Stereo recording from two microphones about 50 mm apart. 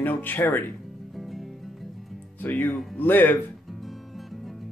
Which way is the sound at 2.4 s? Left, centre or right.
Left.